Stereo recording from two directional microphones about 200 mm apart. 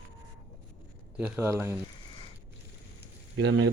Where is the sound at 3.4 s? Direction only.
60° right (ahead or behind).